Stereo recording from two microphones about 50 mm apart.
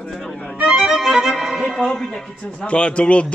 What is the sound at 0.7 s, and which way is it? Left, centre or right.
Violin, centre.